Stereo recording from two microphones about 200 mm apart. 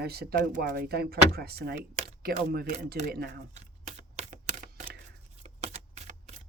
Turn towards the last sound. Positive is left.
turn(degrees=-35)  # may be behind; listen again after turning